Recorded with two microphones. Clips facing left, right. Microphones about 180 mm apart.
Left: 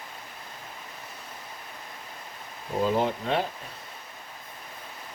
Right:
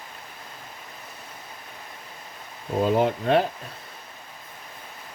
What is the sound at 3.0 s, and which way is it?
Speech, 60° right (ahead or behind).